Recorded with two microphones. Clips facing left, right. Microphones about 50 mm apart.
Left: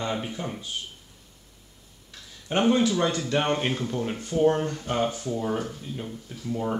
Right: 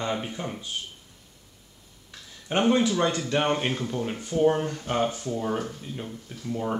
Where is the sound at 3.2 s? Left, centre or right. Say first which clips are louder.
Even; centre.